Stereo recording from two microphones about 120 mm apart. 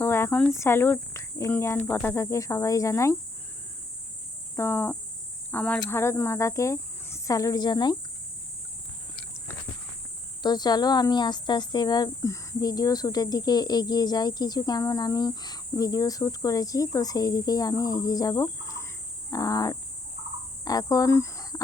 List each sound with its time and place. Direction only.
0.0 s cricket: 20° left (ahead or behind)
0.5 s speech: 20° left (ahead or behind)
1.9 s cricket: 20° left (ahead or behind)
4.5 s cricket: 20° left (ahead or behind)
5.5 s speech: 10° left (ahead or behind); by 7.9 s 40° left (ahead or behind)
10.4 s speech: 35° left (ahead or behind)
19.3 s cricket: 30° left (ahead or behind)
20.7 s speech: 30° left (ahead or behind)